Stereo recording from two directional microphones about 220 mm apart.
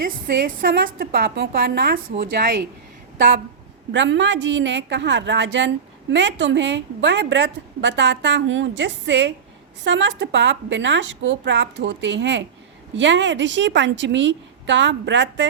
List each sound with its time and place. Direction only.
0.0 s a woman's voice: 40° right (ahead or behind)
3.9 s a woman's voice: 55° right (ahead or behind)